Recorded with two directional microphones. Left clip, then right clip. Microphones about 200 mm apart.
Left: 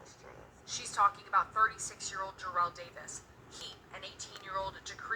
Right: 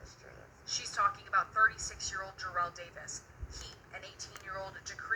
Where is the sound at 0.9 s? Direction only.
25° left (ahead or behind).